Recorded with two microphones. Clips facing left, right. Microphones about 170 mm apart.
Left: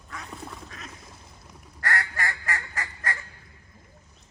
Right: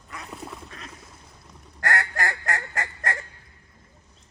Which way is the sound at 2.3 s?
70° right (ahead or behind).